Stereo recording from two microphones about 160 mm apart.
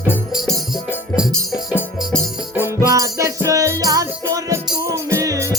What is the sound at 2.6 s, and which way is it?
Music, 20° right (ahead or behind).